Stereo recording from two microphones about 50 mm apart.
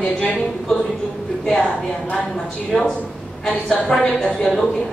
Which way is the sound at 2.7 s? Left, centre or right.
Centre.